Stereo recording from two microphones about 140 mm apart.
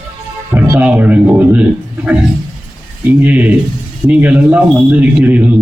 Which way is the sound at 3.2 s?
10° right (ahead or behind).